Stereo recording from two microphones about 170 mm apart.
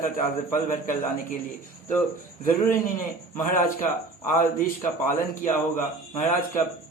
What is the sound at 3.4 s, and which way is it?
A man's voice, 50° left (ahead or behind).